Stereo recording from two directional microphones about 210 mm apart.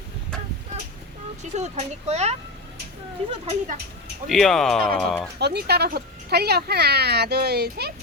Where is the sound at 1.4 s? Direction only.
30° right (ahead or behind).